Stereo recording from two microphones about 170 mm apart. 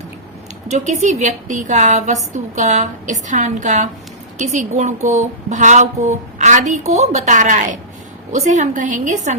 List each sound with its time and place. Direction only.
0.7 s a woman's voice: 45° right (ahead or behind)